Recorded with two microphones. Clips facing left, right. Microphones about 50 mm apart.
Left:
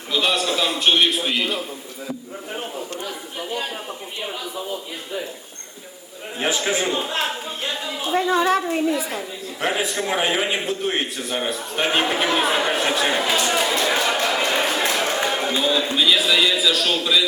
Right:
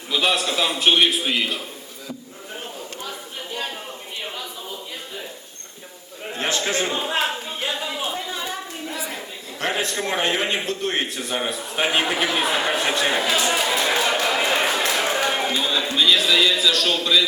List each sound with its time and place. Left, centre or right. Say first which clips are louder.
0.1 s a man's voice: even; centre
6.3 s a man's voice: left 1 dB; centre
7.3 s speech: even; centre
8.1 s a woman's voice: left 11 dB; left
9.0 s a man's voice: left 4 dB; centre
14.9 s a sound: even; centre
15.6 s a man's voice: left 2 dB; centre